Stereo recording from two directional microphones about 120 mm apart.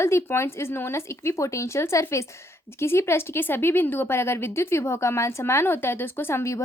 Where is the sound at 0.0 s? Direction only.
20° left (ahead or behind).